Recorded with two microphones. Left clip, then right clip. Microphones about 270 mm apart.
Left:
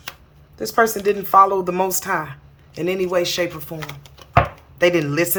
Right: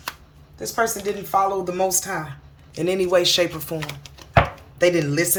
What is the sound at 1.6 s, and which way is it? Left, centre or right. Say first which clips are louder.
Speech: left 1 dB; centre.